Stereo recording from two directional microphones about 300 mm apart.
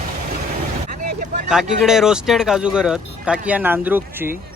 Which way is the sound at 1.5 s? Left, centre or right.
Centre.